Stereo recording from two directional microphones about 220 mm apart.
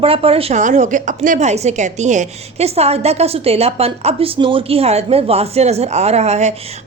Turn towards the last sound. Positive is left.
turn(degrees=-30)  # may be behind; listen again after turning